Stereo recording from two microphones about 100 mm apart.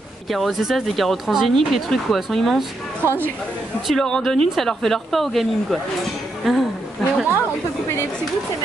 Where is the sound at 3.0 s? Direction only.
20° right (ahead or behind).